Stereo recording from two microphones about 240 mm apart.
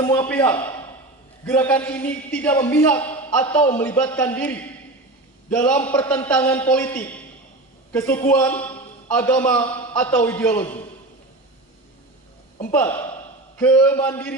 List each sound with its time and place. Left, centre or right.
0.0 s a man's voice: centre
0.3 s a man's voice: centre
0.6 s a sound: centre
1.5 s a man's voice: centre
9.6 s a man's voice: left
9.9 s a man's voice: centre
12.7 s a man's voice: centre